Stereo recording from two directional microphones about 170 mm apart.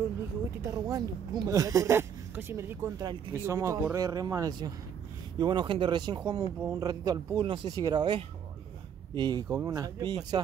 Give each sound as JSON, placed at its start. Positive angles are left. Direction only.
{"t": 0.7, "sound": "speech", "side_deg": -20}